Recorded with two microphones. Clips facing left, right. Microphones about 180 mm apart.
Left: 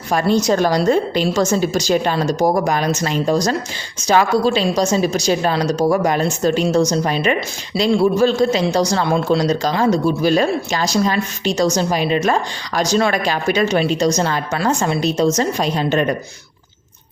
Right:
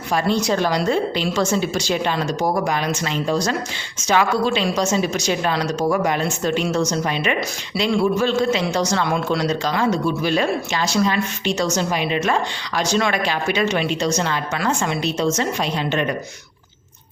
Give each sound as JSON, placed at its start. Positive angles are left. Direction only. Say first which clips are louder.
{"t": 0.1, "sound": "a man's voice", "louder": "left 4 dB", "side_deg": 45}